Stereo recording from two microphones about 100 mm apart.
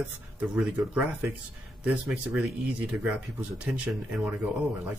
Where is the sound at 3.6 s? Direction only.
5° right (ahead or behind).